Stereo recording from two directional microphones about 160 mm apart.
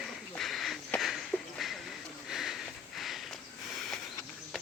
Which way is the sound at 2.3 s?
Centre (ahead or behind).